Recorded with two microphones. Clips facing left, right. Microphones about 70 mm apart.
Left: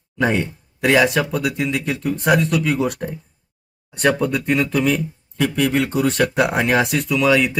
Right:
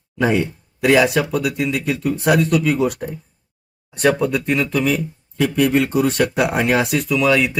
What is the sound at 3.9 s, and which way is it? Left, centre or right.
Speech, centre.